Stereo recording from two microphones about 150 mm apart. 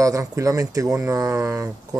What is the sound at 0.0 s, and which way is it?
Speech, 20° right (ahead or behind).